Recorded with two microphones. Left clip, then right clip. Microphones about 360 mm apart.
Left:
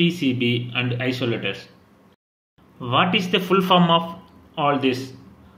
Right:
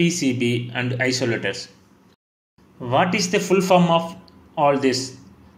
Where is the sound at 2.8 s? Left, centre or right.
Centre.